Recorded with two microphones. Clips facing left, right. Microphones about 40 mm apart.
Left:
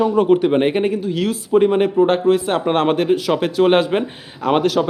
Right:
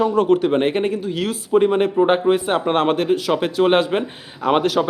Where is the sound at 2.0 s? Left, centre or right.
Centre.